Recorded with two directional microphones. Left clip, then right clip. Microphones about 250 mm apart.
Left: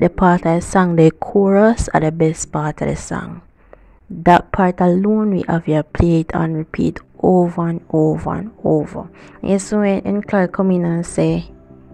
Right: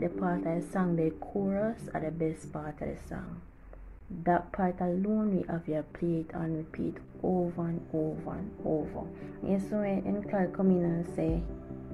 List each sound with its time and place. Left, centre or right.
0.0 s a woman's voice: left